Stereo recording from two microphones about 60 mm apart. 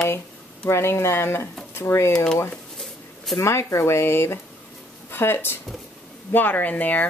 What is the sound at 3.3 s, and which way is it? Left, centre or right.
Speech, left.